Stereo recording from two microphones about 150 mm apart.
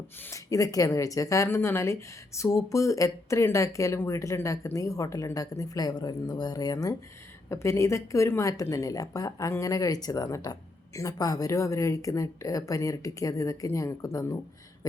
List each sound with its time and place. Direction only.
0.3 s speech: 20° left (ahead or behind)